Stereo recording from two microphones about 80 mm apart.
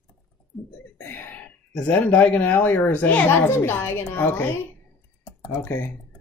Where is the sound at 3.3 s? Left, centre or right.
Left.